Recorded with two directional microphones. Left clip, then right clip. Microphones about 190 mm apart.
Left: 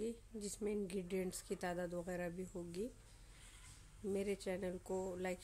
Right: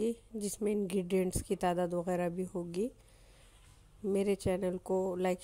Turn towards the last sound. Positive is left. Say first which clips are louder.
# right 10 dB
turn(degrees=-40)  # may be behind; listen again after turning